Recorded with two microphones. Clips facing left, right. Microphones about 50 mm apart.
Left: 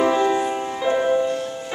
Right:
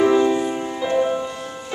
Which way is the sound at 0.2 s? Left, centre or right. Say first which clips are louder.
Right 1 dB; centre.